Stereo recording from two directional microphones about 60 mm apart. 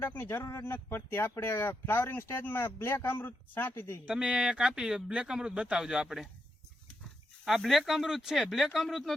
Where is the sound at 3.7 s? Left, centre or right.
Left.